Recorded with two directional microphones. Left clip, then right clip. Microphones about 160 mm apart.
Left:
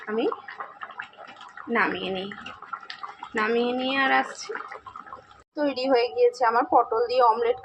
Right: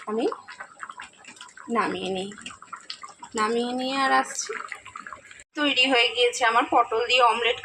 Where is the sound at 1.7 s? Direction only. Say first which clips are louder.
Left 1 dB; 30° right (ahead or behind).